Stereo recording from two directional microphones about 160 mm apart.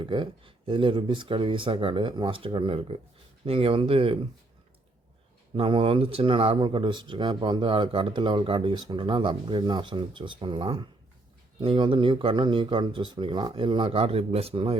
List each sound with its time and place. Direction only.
0.0 s speech: 30° right (ahead or behind)
5.5 s speech: 35° right (ahead or behind)